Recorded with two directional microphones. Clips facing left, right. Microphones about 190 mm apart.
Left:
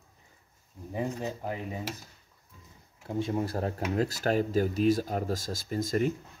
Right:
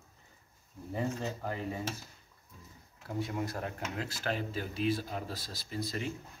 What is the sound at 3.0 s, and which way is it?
Speech, 25° left (ahead or behind).